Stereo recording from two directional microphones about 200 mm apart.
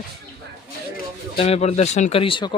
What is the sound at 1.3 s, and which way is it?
Speech, 30° left (ahead or behind).